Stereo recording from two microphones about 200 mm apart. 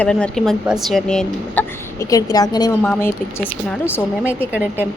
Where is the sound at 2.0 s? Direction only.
20° left (ahead or behind).